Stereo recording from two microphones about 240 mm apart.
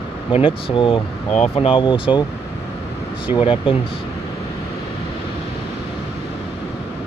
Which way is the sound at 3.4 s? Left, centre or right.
Left.